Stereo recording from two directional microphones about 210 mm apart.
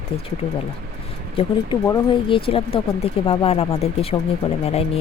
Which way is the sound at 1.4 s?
25° left (ahead or behind).